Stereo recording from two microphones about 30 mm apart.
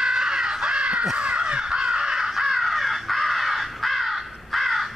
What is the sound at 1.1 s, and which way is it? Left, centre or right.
Crow, right.